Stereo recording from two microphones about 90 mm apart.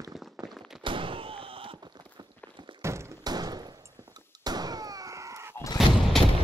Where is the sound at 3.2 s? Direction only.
50° right (ahead or behind).